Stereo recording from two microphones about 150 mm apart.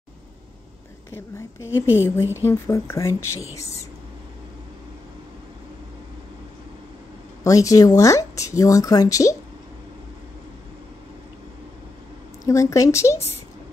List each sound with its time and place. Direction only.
1.8 s a woman's voice: 15° left (ahead or behind)
7.4 s speech: 20° left (ahead or behind)
12.4 s speech: 20° left (ahead or behind)